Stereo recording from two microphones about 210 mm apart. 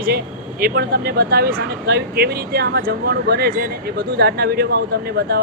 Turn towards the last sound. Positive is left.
turn(degrees=-50)  # may be behind; listen again after turning